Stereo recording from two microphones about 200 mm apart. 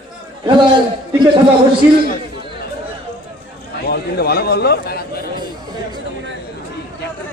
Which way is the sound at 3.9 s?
50° left (ahead or behind).